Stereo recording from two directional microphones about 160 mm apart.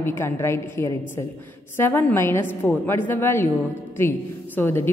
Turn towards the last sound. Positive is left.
turn(degrees=15)  # may be behind; listen again after turning